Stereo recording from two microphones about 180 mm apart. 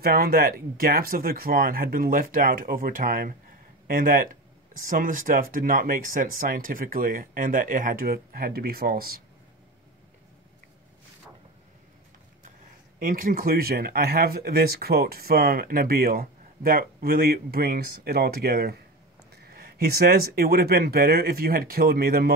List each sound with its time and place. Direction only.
0.0 s speech: 55° right (ahead or behind)
13.0 s speech: 50° right (ahead or behind)